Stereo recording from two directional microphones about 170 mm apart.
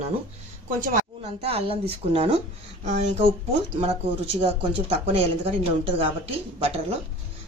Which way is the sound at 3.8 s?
35° right (ahead or behind).